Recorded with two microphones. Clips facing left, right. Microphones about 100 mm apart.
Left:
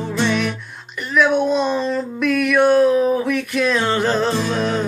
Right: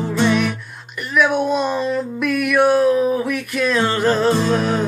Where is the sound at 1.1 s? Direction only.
5° right (ahead or behind).